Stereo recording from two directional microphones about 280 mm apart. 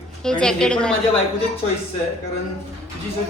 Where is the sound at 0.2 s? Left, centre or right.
Centre.